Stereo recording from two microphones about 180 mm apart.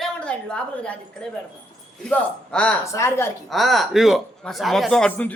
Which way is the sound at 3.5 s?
Centre (ahead or behind).